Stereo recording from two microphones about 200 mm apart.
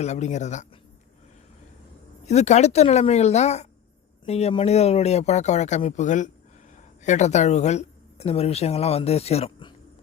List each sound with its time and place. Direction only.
0.0 s speech: 35° left (ahead or behind)
2.2 s speech: 35° left (ahead or behind)